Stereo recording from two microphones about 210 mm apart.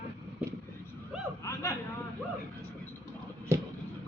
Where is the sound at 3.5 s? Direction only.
10° right (ahead or behind).